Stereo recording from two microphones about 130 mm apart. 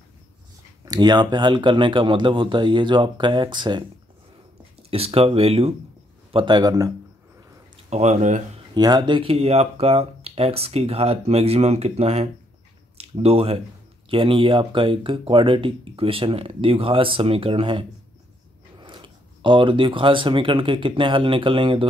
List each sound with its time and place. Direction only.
0.8 s speech: 30° right (ahead or behind)
4.9 s speech: 50° right (ahead or behind)
6.3 s speech: 35° right (ahead or behind)
7.9 s speech: 60° right (ahead or behind)
8.7 s speech: 30° right (ahead or behind)